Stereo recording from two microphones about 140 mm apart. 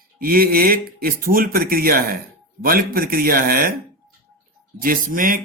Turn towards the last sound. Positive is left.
turn(degrees=-80)